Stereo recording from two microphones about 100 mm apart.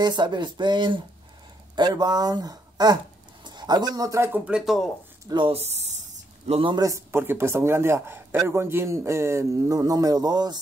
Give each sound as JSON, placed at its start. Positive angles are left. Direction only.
{"t": 0.0, "sound": "speech", "side_deg": -45}
{"t": 4.3, "sound": "speech", "side_deg": -10}
{"t": 5.5, "sound": "speech", "side_deg": -90}
{"t": 6.4, "sound": "a man's voice", "side_deg": -80}
{"t": 6.7, "sound": "a man's voice", "side_deg": -35}